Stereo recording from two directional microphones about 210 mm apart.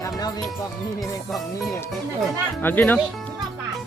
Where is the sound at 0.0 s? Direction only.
20° left (ahead or behind).